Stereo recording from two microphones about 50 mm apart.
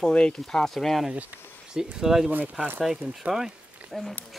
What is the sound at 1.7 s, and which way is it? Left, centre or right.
Speech, centre.